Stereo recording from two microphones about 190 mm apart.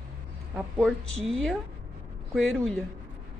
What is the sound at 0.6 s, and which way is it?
A woman's voice, centre (ahead or behind).